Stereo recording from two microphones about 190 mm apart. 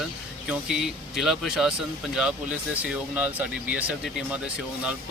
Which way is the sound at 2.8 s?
5° right (ahead or behind).